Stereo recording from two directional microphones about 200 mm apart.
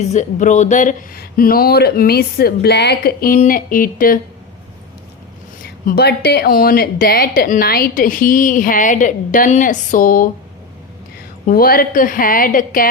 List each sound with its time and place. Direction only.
0.0 s a woman's voice: 35° left (ahead or behind)
5.6 s a woman's voice: 50° left (ahead or behind)
11.4 s a woman's voice: 45° left (ahead or behind)